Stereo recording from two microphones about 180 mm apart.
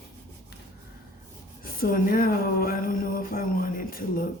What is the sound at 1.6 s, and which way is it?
Speech, 50° left (ahead or behind).